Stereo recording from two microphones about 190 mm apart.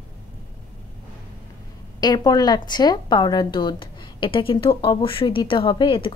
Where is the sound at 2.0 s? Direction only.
20° left (ahead or behind).